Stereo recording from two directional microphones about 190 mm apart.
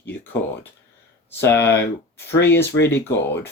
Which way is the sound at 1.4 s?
10° left (ahead or behind).